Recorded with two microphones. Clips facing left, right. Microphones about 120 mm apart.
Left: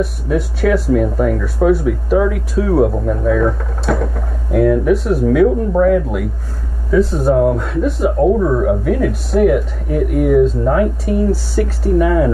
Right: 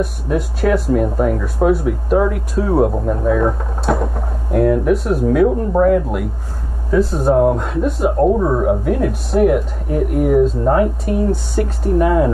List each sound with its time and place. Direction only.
0.0 s speech: centre (ahead or behind)
8.4 s speech: 15° right (ahead or behind)
8.6 s speech: 5° right (ahead or behind)